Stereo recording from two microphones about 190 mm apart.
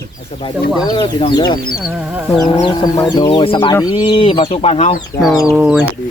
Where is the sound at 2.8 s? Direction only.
20° left (ahead or behind).